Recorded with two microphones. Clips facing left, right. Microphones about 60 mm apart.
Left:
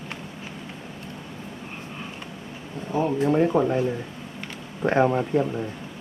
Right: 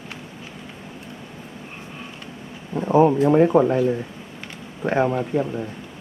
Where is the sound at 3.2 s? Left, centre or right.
Centre.